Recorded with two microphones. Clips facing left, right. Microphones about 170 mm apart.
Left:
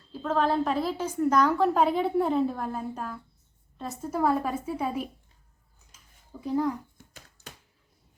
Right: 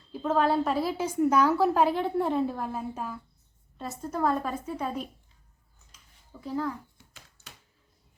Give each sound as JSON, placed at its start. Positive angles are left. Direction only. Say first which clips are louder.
{"t": 0.1, "sound": "a woman's voice", "louder": "right 1 dB", "side_deg": -10}
{"t": 6.4, "sound": "a woman's voice", "louder": "left 4 dB", "side_deg": 15}